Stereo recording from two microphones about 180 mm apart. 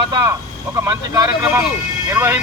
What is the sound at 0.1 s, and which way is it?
Speech, 20° right (ahead or behind).